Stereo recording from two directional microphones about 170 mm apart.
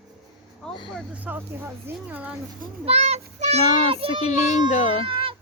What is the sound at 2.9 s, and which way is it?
Child singing, 40° right (ahead or behind).